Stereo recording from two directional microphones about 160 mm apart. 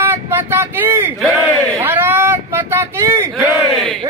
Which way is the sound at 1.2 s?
Centre (ahead or behind).